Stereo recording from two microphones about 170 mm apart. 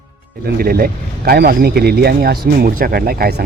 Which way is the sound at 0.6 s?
60° right (ahead or behind).